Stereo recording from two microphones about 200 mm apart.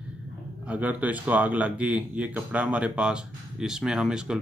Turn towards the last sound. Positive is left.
turn(degrees=-5)  # may be behind; listen again after turning